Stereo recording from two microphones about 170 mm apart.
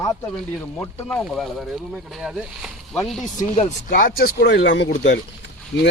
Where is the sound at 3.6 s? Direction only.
50° left (ahead or behind).